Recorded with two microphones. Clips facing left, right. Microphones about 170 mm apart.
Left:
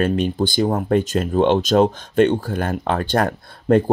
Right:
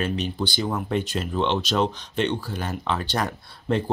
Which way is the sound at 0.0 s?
50° left (ahead or behind).